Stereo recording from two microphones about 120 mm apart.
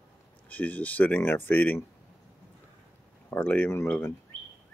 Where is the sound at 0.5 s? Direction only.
15° left (ahead or behind).